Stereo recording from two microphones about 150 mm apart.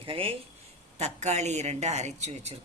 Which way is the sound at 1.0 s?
50° right (ahead or behind).